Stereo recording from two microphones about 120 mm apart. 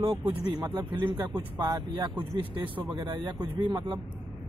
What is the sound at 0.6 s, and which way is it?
Speech, 35° right (ahead or behind).